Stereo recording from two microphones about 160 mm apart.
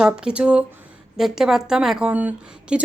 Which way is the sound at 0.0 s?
5° right (ahead or behind).